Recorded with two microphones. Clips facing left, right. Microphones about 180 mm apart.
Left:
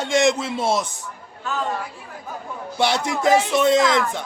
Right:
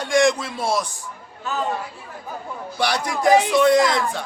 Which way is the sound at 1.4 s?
Centre (ahead or behind).